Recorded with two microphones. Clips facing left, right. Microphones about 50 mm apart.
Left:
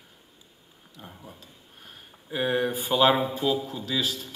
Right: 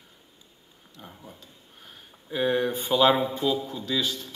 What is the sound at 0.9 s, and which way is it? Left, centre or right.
A man's voice, centre.